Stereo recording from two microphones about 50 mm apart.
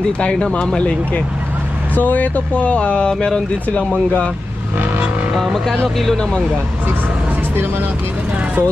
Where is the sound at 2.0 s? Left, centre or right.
Left; by 3.4 s centre.